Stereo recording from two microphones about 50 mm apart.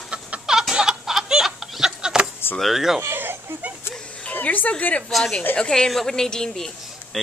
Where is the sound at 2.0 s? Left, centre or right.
Centre.